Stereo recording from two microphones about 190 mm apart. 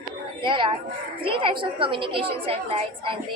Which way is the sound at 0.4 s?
25° right (ahead or behind).